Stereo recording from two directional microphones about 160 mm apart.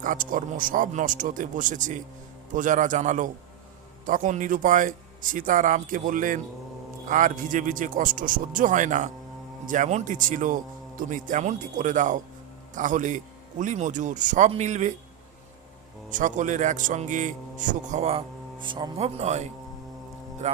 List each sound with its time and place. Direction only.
0.0 s a man's voice: 55° right (ahead or behind)
16.0 s a man's voice: 55° right (ahead or behind)
18.9 s a man's voice: 40° right (ahead or behind)